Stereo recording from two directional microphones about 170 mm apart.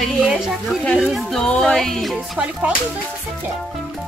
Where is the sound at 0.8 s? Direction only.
5° left (ahead or behind).